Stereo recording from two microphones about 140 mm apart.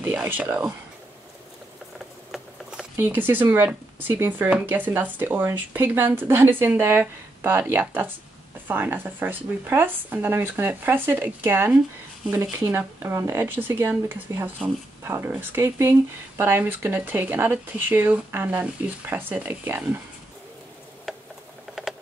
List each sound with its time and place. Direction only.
0.0 s speech: 15° right (ahead or behind)
2.3 s patter: 5° right (ahead or behind)
3.0 s speech: 15° right (ahead or behind)